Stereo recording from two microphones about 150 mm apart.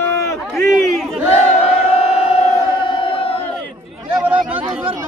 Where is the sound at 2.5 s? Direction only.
35° left (ahead or behind).